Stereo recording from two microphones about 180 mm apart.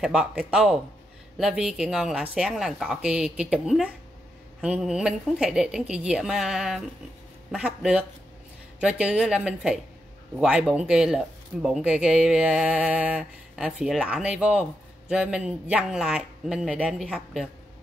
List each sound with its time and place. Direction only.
0.0 s speech: 5° right (ahead or behind)